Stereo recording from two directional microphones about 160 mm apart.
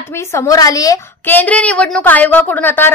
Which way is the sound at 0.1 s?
15° left (ahead or behind).